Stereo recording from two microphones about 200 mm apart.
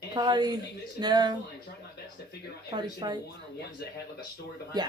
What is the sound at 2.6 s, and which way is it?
Speech, 20° right (ahead or behind).